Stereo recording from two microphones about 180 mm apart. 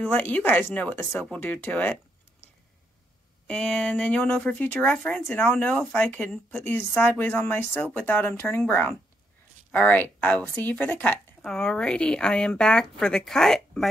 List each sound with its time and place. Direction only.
0.1 s speech: 10° left (ahead or behind)
3.4 s speech: 5° left (ahead or behind)